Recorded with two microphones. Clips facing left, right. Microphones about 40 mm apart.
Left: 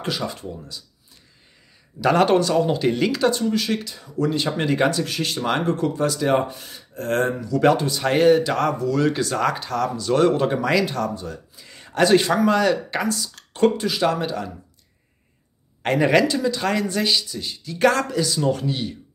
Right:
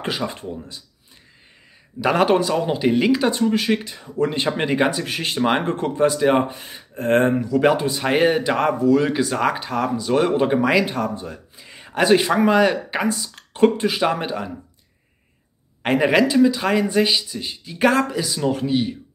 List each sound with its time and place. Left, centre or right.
0.0 s speech: right
2.0 s speech: centre
15.8 s speech: centre